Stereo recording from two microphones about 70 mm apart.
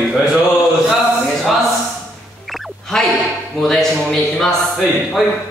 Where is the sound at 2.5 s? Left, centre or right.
Centre.